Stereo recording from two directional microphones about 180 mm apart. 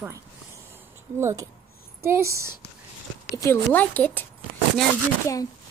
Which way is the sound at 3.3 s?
15° left (ahead or behind).